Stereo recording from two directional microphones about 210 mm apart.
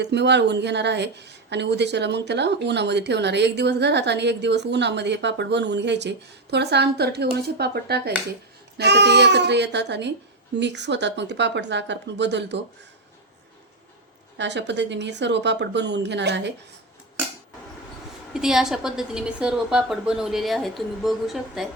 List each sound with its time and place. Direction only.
0.0 s a woman's voice: 55° right (ahead or behind)
14.3 s a woman's voice: 55° right (ahead or behind)
18.3 s a woman's voice: centre (ahead or behind)